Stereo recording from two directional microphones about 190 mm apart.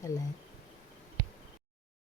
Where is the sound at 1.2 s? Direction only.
50° left (ahead or behind).